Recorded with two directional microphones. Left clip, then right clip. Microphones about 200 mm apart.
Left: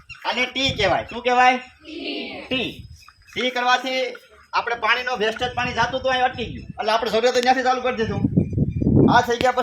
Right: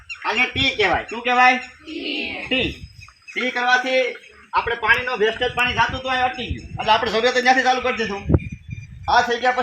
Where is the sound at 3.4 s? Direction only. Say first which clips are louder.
Right 1 dB; 30° left (ahead or behind).